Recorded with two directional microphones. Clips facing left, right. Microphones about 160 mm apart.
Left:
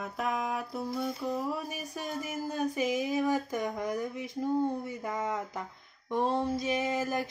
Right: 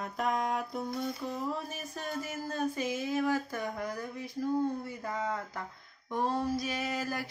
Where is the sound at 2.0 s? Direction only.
15° left (ahead or behind).